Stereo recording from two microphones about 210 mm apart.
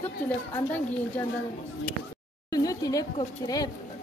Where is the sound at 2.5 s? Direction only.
15° left (ahead or behind).